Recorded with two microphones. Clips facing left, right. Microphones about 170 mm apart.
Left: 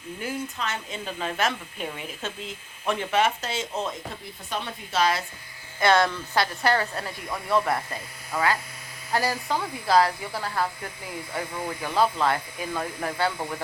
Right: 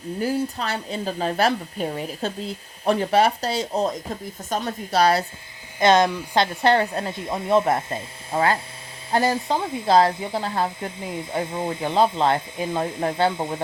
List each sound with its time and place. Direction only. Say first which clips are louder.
0.2 s speech: right 7 dB; 35° right (ahead or behind)
5.8 s speech: right 4 dB; 20° right (ahead or behind)